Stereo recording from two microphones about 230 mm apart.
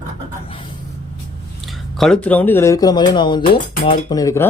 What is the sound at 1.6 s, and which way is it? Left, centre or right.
Speech, centre.